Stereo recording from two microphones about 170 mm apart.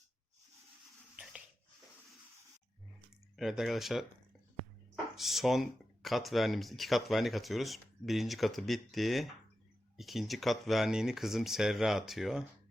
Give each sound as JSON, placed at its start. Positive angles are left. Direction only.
{"t": 1.1, "sound": "a sound", "side_deg": -5}
{"t": 3.3, "sound": "speech", "side_deg": 0}
{"t": 5.1, "sound": "speech", "side_deg": 0}